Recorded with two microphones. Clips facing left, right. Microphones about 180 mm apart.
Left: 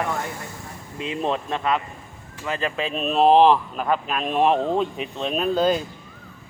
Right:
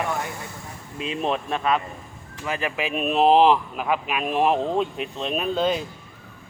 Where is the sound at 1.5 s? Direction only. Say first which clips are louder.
Even; 15° right (ahead or behind).